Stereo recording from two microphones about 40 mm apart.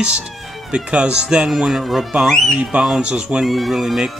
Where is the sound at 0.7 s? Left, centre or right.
Right.